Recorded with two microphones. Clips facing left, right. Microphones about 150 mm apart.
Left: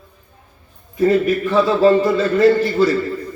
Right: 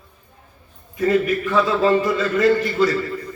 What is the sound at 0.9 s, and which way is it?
A man's voice, 25° left (ahead or behind).